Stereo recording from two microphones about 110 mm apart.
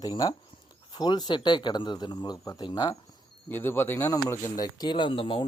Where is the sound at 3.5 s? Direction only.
20° left (ahead or behind).